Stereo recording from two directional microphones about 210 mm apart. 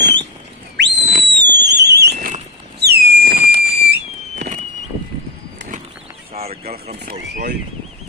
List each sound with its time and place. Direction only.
0.0 s whistle: 55° right (ahead or behind)
6.3 s fowl: 30° right (ahead or behind)